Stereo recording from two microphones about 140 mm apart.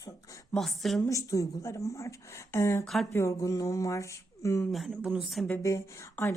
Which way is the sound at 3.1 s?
20° left (ahead or behind).